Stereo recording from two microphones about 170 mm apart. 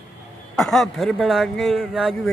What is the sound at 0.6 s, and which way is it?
A man's voice, centre (ahead or behind).